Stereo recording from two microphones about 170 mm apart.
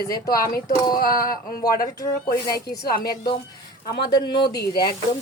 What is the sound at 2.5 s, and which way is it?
Speech, 60° left (ahead or behind).